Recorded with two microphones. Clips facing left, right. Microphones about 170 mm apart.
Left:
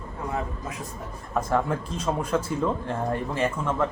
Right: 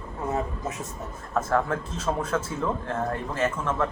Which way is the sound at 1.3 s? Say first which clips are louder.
Even; 10° left (ahead or behind).